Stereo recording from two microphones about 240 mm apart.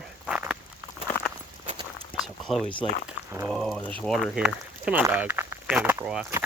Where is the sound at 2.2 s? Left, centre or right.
Centre.